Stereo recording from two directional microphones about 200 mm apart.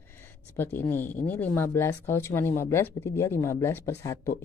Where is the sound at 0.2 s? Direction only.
10° left (ahead or behind).